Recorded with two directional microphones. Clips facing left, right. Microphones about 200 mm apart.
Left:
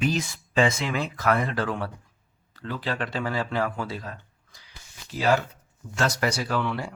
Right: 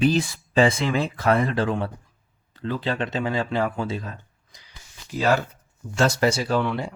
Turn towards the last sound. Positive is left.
turn(degrees=-20)  # may be behind; listen again after turning